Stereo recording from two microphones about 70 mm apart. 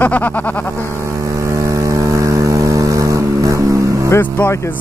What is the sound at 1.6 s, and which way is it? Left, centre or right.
Vehicle, right.